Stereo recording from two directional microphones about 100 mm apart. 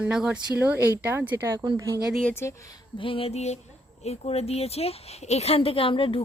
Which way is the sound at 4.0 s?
90° left.